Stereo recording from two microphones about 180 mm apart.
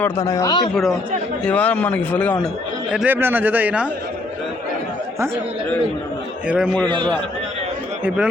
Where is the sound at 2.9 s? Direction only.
10° right (ahead or behind).